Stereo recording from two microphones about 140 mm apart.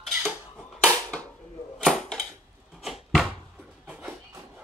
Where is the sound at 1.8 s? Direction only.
5° left (ahead or behind).